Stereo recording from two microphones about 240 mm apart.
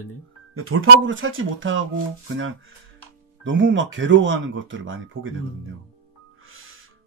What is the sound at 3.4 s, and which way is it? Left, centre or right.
Speech, right.